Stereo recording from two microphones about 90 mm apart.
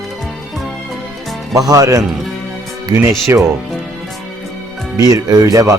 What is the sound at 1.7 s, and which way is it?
Speech, 40° right (ahead or behind).